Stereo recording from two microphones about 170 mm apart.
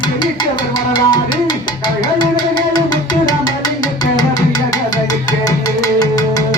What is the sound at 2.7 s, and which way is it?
Music, 25° left (ahead or behind).